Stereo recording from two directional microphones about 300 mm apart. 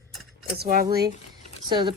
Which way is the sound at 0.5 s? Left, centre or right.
Right.